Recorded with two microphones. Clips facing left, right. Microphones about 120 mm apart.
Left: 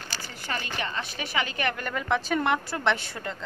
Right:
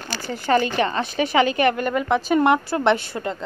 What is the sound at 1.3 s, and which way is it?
Speech, 90° right.